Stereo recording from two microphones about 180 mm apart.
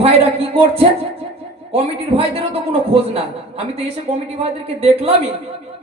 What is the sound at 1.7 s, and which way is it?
A man's voice, 35° right (ahead or behind).